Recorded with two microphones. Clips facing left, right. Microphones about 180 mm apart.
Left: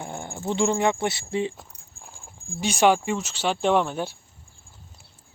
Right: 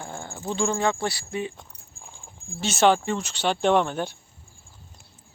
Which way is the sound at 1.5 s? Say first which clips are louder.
Left 1 dB; 5° left (ahead or behind).